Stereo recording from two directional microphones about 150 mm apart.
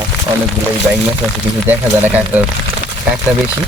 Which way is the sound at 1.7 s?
10° right (ahead or behind).